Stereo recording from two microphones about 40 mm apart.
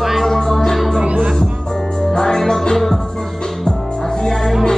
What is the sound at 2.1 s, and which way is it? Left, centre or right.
Music, centre.